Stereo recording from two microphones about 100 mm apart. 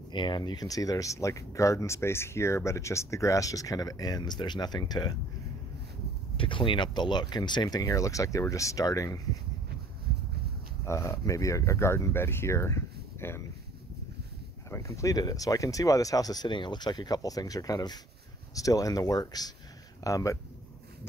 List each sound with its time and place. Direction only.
0.1 s speech: 50° left (ahead or behind)
6.3 s speech: 60° left (ahead or behind); by 9.4 s 35° left (ahead or behind)
10.9 s speech: 30° left (ahead or behind)
14.7 s speech: 30° left (ahead or behind)